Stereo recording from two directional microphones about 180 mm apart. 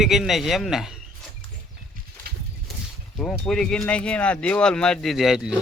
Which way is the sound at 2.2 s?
60° right (ahead or behind).